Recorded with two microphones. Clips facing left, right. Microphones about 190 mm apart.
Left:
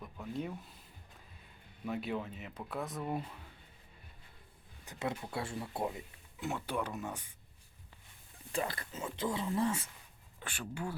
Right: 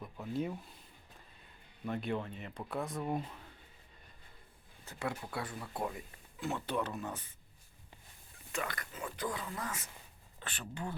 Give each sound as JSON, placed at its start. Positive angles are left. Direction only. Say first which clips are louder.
{"t": 0.0, "sound": "a sound", "louder": "right 3 dB", "side_deg": 0}
{"t": 1.8, "sound": "speech", "louder": "right 1 dB", "side_deg": 5}
{"t": 4.9, "sound": "speech", "louder": "left 1 dB", "side_deg": 20}
{"t": 8.5, "sound": "speech", "louder": "left 3 dB", "side_deg": 30}
{"t": 10.4, "sound": "speech", "louder": "left 2 dB", "side_deg": 10}